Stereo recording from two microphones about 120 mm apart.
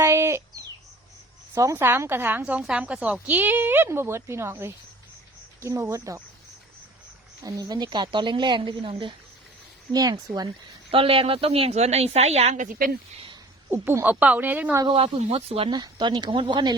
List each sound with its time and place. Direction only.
0.0 s a sound: 25° right (ahead or behind)
1.5 s a woman's voice: 25° right (ahead or behind)
7.4 s speech: 30° right (ahead or behind)
9.9 s speech: 30° right (ahead or behind)
10.9 s speech: 50° right (ahead or behind); by 12.7 s 75° right (ahead or behind)
13.7 s speech: 15° right (ahead or behind)
14.8 s speech: 45° right (ahead or behind)
15.2 s speech: 55° right (ahead or behind)
15.7 s speech: 35° right (ahead or behind)